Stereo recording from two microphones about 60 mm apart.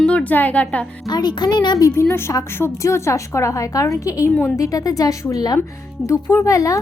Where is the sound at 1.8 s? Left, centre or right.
Left.